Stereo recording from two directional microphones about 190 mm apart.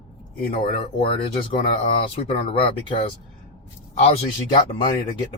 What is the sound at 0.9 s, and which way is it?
Speech, 30° left (ahead or behind).